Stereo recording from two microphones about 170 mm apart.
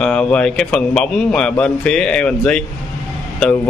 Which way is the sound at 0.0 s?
5° left (ahead or behind).